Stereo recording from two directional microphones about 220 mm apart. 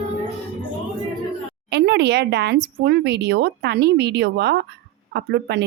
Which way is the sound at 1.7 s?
50° right (ahead or behind).